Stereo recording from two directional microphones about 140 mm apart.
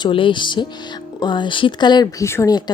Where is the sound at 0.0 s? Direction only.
35° left (ahead or behind).